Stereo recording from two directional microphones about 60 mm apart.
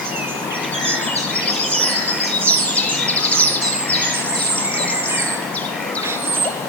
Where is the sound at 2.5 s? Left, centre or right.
Left.